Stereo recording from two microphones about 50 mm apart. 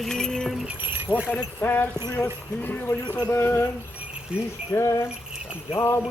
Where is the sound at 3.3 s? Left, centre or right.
Left.